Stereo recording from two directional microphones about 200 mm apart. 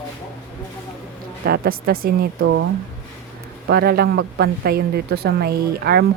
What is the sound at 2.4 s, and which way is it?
Speech, 65° right (ahead or behind).